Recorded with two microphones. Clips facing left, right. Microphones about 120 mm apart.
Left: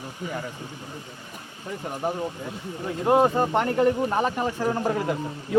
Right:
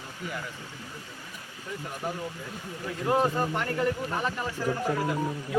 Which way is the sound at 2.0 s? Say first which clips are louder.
Left 7 dB; 25° left (ahead or behind).